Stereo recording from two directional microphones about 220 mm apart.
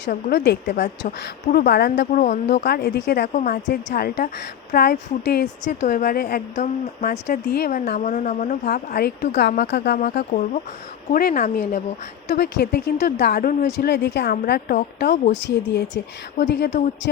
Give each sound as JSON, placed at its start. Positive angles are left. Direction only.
{"t": 0.0, "sound": "speech", "side_deg": 50}
{"t": 2.6, "sound": "speech", "side_deg": 45}
{"t": 5.6, "sound": "speech", "side_deg": 35}
{"t": 7.4, "sound": "speech", "side_deg": 45}
{"t": 15.1, "sound": "speech", "side_deg": 35}
{"t": 15.4, "sound": "speech", "side_deg": 55}